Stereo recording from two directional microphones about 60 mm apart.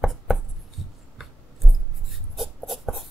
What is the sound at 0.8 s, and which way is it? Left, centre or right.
Writing, centre.